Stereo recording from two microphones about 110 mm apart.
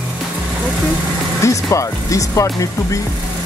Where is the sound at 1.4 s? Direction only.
30° left (ahead or behind).